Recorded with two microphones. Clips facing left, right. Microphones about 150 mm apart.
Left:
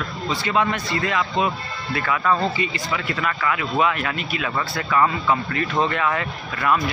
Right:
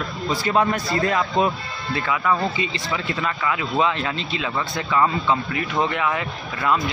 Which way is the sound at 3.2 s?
25° right (ahead or behind).